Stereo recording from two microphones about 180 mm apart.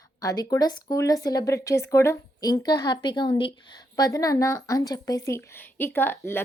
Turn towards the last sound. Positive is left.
turn(degrees=10)  # may be behind; listen again after turning